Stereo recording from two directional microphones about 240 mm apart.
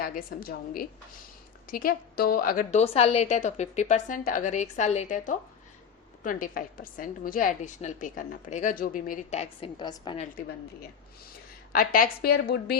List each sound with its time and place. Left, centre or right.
0.0 s a woman's voice: left; by 10.2 s centre
11.7 s a woman's voice: left